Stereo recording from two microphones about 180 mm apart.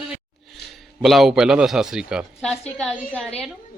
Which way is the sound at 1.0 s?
Centre (ahead or behind).